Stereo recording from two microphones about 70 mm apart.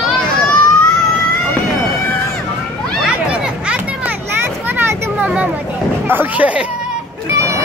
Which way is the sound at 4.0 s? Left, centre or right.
Right.